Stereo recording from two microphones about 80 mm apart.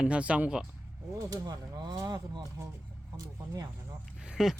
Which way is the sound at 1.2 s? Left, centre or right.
Right.